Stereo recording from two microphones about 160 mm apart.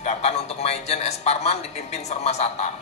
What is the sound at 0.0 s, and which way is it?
A man's voice, 45° left (ahead or behind).